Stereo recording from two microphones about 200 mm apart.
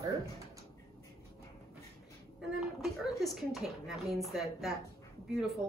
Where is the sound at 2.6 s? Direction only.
Centre (ahead or behind).